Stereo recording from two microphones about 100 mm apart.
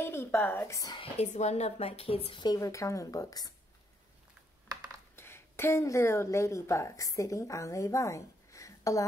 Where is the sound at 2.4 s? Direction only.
35° left (ahead or behind).